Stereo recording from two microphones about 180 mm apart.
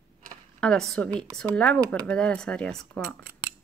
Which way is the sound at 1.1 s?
25° right (ahead or behind).